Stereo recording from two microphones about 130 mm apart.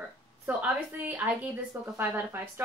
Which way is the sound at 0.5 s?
15° right (ahead or behind).